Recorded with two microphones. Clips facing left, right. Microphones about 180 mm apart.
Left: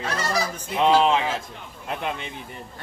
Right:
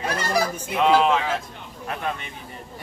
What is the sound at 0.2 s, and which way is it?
Honk, 55° right (ahead or behind).